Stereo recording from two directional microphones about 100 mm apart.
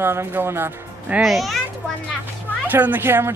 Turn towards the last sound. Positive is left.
turn(degrees=-20)  # may be behind; listen again after turning